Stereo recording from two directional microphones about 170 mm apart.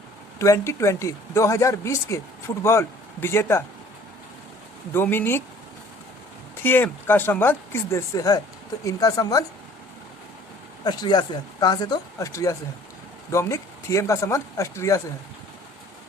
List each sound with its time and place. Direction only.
0.3 s speech: 20° left (ahead or behind)
4.9 s speech: 15° left (ahead or behind)
6.6 s speech: 10° left (ahead or behind)
10.8 s speech: 25° left (ahead or behind)